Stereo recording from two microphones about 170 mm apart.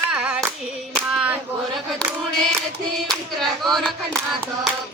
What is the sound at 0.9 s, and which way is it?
Cap gun, 5° right (ahead or behind).